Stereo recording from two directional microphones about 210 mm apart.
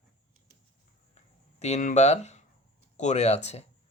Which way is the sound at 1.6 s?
35° left (ahead or behind).